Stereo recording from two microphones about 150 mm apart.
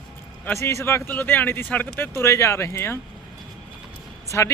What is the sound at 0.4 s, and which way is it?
Speech, 15° left (ahead or behind).